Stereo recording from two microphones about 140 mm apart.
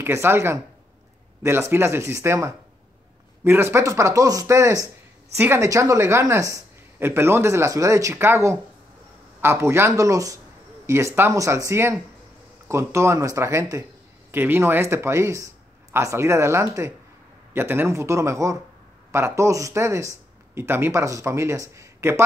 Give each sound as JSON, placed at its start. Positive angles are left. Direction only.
{"t": 0.0, "sound": "speech", "side_deg": -15}